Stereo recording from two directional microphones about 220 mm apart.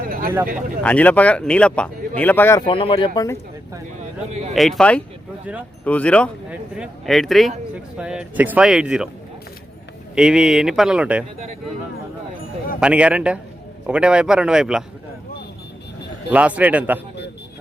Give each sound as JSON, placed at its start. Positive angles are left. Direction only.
{"t": 0.0, "sound": "a sound", "side_deg": -40}
{"t": 0.8, "sound": "speech", "side_deg": 5}
{"t": 2.6, "sound": "speech", "side_deg": 25}
{"t": 4.3, "sound": "speech", "side_deg": -30}
{"t": 4.5, "sound": "speech", "side_deg": 0}
{"t": 10.2, "sound": "speech", "side_deg": -5}
{"t": 12.8, "sound": "speech", "side_deg": -5}
{"t": 16.3, "sound": "a man's voice", "side_deg": -5}